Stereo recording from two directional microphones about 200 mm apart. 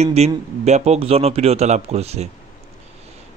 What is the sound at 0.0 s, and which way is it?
Speech, 30° right (ahead or behind).